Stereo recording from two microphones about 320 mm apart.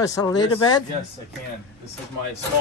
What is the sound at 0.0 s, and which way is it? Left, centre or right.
Speech, centre.